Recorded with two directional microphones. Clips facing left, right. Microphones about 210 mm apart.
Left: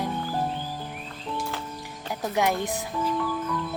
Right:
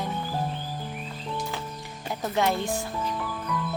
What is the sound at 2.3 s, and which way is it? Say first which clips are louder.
Speech: even; 15° left (ahead or behind).